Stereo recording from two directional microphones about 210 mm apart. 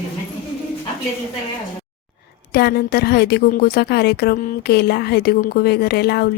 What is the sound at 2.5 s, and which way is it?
A woman's voice, 50° left (ahead or behind).